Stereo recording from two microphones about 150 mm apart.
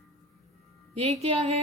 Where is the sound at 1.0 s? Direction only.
40° right (ahead or behind).